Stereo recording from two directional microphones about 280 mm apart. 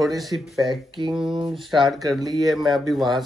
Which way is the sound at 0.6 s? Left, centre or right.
Centre.